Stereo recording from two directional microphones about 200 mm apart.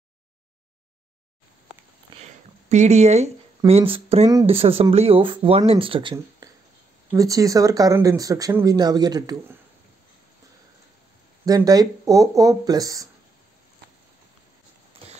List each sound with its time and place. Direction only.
2.1 s a sound: 25° right (ahead or behind)
2.7 s speech: 35° right (ahead or behind); by 9.4 s 20° right (ahead or behind)
11.4 s speech: 20° right (ahead or behind)